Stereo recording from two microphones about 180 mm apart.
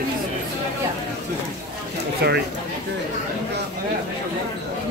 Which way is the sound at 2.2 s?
65° right (ahead or behind).